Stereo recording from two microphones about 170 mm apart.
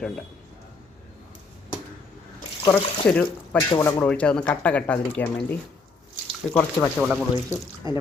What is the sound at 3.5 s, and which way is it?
Speech, 15° left (ahead or behind).